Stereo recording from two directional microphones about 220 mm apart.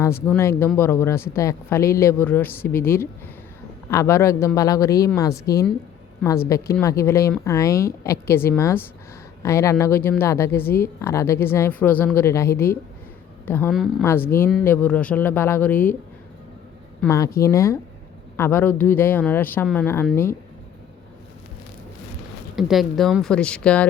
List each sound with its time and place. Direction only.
0.0 s a woman's voice: 10° left (ahead or behind)
6.8 s a woman's voice: 15° left (ahead or behind)
14.0 s a woman's voice: 10° left (ahead or behind)
17.0 s a woman's voice: 15° left (ahead or behind)
22.5 s speech: centre (ahead or behind)